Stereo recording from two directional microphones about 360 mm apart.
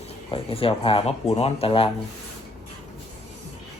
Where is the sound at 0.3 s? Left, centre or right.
Centre.